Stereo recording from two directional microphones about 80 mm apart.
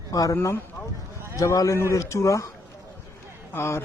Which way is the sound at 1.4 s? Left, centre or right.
Left.